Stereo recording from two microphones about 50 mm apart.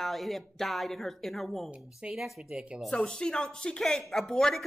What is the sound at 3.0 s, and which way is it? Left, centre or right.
Speech, centre.